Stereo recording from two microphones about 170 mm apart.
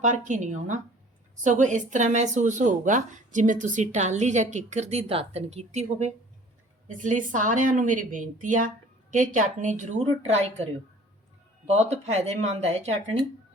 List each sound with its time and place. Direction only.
0.0 s speech: 45° right (ahead or behind)